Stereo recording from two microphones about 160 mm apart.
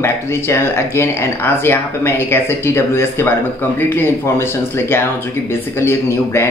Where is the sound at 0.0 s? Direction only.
15° left (ahead or behind).